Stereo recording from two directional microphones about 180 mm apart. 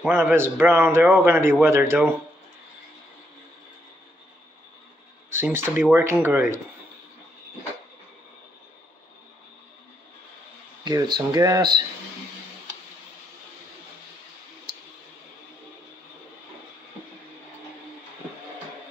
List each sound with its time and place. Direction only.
0.0 s a man's voice: 10° right (ahead or behind)
5.3 s a man's voice: 15° right (ahead or behind)
10.8 s speech: 20° right (ahead or behind)